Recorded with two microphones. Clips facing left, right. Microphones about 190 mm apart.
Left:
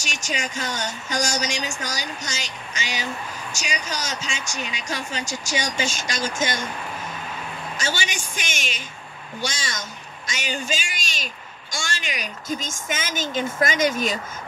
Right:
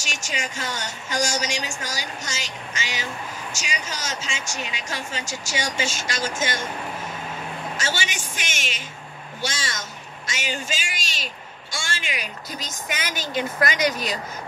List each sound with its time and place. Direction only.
0.0 s speech: 15° left (ahead or behind)
7.7 s a woman's voice: 15° left (ahead or behind)
11.7 s speech: 40° left (ahead or behind)
13.2 s speech: 25° left (ahead or behind)